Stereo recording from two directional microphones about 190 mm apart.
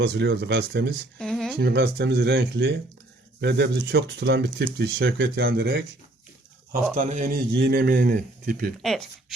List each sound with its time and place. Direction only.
0.0 s speech: 65° right (ahead or behind)
1.2 s a sound: 5° left (ahead or behind)
1.5 s speech: 60° right (ahead or behind)
6.9 s a man's voice: 40° right (ahead or behind)
7.5 s speech: 60° right (ahead or behind)
8.8 s speech: centre (ahead or behind)